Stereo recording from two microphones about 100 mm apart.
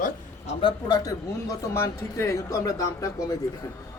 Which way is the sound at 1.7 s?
25° left (ahead or behind).